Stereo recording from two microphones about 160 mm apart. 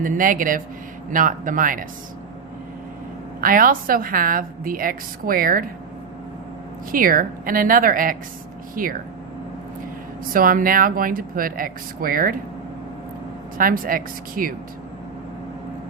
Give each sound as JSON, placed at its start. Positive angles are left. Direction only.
{"t": 0.0, "sound": "a woman's voice", "side_deg": -55}
{"t": 3.4, "sound": "a woman's voice", "side_deg": -60}
{"t": 6.9, "sound": "a woman's voice", "side_deg": -65}
{"t": 10.3, "sound": "a woman's voice", "side_deg": -60}
{"t": 13.6, "sound": "a woman's voice", "side_deg": -60}